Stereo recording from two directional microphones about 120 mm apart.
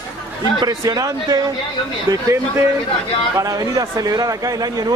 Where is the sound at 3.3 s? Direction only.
30° right (ahead or behind).